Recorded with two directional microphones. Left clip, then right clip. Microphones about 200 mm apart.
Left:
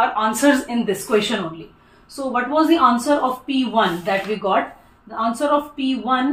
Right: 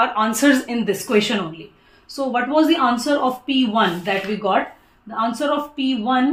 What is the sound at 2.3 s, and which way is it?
Speech, 55° right (ahead or behind).